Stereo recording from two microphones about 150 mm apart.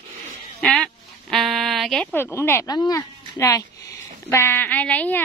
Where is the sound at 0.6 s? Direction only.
Centre (ahead or behind).